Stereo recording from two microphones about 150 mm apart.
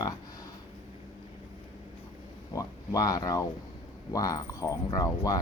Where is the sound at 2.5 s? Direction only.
20° left (ahead or behind).